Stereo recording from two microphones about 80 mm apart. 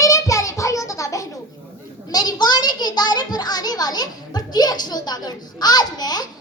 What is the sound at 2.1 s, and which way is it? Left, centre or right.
A child's voice, left.